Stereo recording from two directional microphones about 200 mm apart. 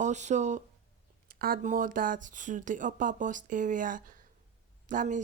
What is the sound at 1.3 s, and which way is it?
Speech, 50° right (ahead or behind).